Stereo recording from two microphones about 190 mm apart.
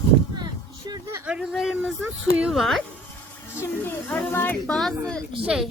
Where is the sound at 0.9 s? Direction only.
20° right (ahead or behind).